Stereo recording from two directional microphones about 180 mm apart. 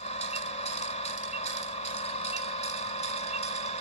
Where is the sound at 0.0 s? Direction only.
35° left (ahead or behind).